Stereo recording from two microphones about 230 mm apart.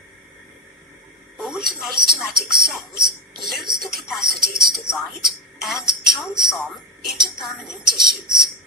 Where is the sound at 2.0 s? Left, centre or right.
Centre.